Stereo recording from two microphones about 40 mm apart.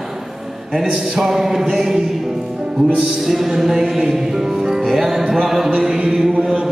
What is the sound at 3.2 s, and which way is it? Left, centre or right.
Music, centre.